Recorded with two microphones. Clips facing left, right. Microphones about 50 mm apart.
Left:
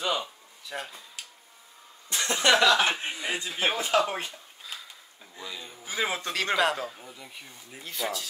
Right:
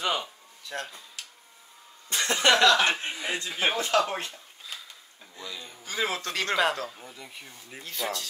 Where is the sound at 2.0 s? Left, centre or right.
Right.